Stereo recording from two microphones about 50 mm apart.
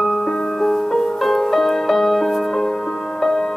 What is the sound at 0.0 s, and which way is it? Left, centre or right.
Music, centre.